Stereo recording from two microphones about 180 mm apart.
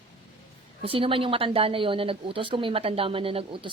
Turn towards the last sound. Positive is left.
turn(degrees=-30)  # may be behind; listen again after turning